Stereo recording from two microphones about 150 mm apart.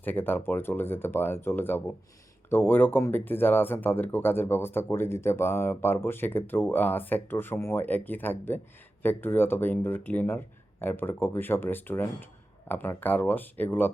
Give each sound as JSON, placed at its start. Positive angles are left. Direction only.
{"t": 0.0, "sound": "speech", "side_deg": 10}